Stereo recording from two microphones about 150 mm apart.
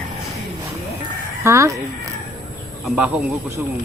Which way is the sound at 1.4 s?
20° right (ahead or behind).